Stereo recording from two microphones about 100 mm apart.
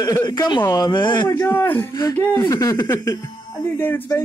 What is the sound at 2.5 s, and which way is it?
Speech, 35° left (ahead or behind).